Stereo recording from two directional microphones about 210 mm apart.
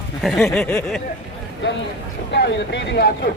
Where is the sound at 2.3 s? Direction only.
55° left (ahead or behind).